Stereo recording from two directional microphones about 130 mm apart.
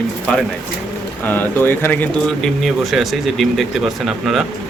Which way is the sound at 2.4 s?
Centre (ahead or behind).